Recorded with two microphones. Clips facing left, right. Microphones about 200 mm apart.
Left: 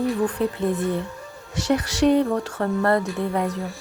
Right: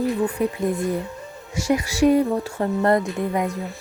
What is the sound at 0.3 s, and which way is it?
Speech, 10° right (ahead or behind).